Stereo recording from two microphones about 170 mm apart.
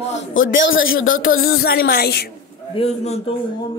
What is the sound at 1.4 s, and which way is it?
Speech, 60° left (ahead or behind).